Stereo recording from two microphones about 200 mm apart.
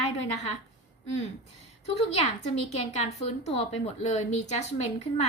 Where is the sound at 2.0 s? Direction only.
30° left (ahead or behind).